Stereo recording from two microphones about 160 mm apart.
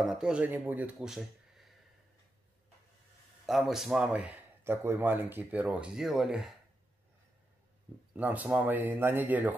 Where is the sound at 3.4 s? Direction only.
Centre (ahead or behind).